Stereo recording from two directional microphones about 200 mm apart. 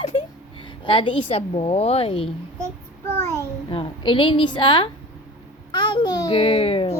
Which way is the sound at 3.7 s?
25° left (ahead or behind).